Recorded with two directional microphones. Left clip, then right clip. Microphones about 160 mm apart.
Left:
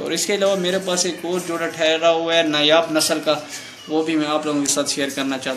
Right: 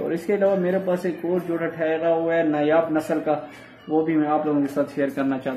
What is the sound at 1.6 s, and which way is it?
A man's voice, 30° right (ahead or behind).